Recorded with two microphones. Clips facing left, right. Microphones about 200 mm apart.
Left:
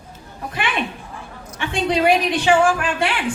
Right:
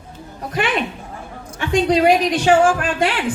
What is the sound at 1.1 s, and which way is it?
A woman's voice, 40° right (ahead or behind).